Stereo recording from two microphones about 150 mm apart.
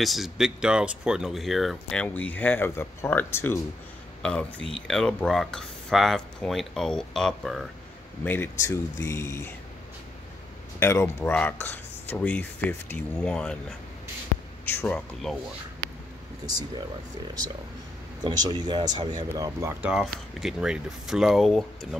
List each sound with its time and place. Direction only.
0.0 s speech: centre (ahead or behind)
8.2 s speech: 15° left (ahead or behind)
10.8 s speech: 20° left (ahead or behind)
18.2 s speech: 25° right (ahead or behind)
19.9 s speech: centre (ahead or behind)